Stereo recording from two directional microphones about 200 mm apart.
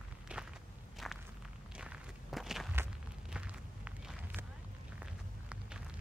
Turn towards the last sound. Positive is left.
turn(degrees=-5)  # may be behind; listen again after turning